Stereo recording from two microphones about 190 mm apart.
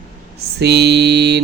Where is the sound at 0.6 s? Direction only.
60° right (ahead or behind).